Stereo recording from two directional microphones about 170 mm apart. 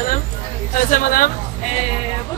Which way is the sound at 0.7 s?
55° left (ahead or behind).